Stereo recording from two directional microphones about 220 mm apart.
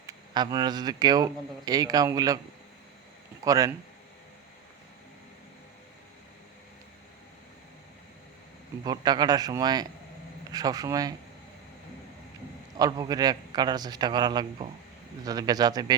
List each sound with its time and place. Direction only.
0.0 s speech: 20° right (ahead or behind)
3.4 s speech: 15° right (ahead or behind)
8.8 s speech: 20° right (ahead or behind)
12.7 s a man's voice: 15° right (ahead or behind)